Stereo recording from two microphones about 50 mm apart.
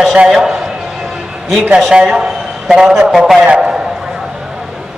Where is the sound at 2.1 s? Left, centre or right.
Centre.